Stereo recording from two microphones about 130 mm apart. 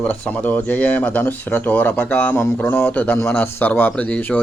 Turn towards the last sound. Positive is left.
turn(degrees=10)  # may be behind; listen again after turning